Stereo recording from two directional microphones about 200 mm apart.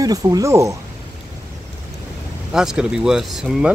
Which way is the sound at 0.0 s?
20° right (ahead or behind).